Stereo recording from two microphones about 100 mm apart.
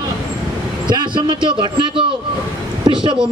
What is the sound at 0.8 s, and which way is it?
A man's voice, 50° right (ahead or behind).